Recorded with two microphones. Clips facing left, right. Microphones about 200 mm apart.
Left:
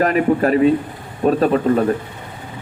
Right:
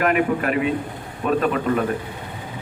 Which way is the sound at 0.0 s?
35° left (ahead or behind).